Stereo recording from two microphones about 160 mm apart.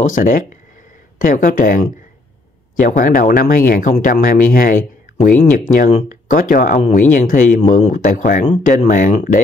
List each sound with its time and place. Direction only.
0.0 s speech: 55° left (ahead or behind)